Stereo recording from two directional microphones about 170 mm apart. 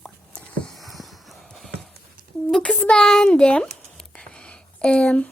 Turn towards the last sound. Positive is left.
turn(degrees=5)  # may be behind; listen again after turning